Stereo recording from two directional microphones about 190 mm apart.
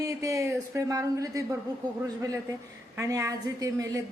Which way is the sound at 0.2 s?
15° right (ahead or behind).